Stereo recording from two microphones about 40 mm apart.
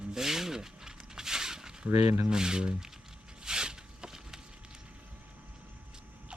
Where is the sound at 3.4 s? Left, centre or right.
Centre.